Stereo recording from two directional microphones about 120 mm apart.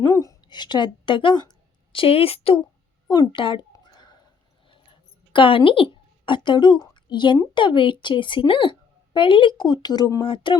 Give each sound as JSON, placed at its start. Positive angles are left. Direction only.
{"t": 0.1, "sound": "speech", "side_deg": 30}
{"t": 3.1, "sound": "a woman's voice", "side_deg": 40}
{"t": 3.7, "sound": "a sound", "side_deg": 35}
{"t": 5.3, "sound": "a woman's voice", "side_deg": 45}